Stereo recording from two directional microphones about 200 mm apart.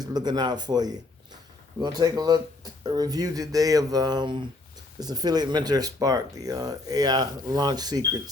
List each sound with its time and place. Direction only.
0.0 s speech: 20° right (ahead or behind)